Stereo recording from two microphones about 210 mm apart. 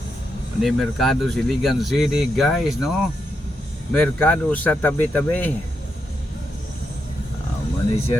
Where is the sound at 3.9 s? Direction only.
5° left (ahead or behind).